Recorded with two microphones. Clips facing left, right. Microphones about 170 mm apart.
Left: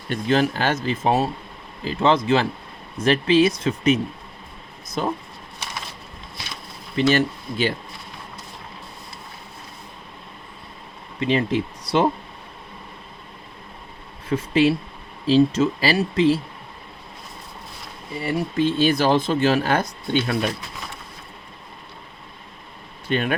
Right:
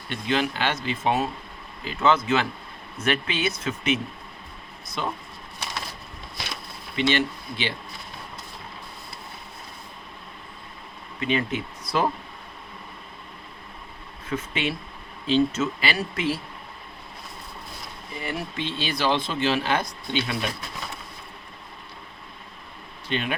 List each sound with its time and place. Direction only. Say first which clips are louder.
0.1 s speech: left 5 dB; 40° left (ahead or behind)
6.9 s speech: left 5 dB; 40° left (ahead or behind)
11.2 s speech: left 5 dB; 30° left (ahead or behind)
14.3 s speech: left 10 dB; 35° left (ahead or behind)
18.2 s speech: left 9 dB; 35° left (ahead or behind)
23.0 s speech: left 5 dB; 50° left (ahead or behind)